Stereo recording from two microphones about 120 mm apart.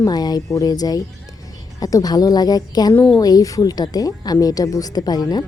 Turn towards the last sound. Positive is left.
turn(degrees=35)  # may be behind; listen again after turning